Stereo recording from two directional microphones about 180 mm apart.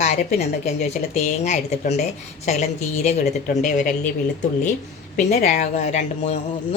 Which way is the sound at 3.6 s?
45° left (ahead or behind).